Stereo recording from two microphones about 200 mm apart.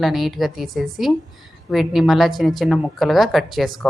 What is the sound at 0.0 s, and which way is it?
A woman's voice, centre (ahead or behind).